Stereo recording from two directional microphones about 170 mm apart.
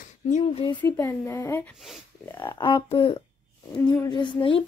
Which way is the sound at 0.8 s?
15° left (ahead or behind).